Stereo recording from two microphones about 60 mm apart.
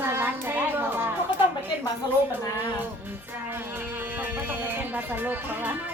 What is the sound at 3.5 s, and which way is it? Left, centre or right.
Speech, right.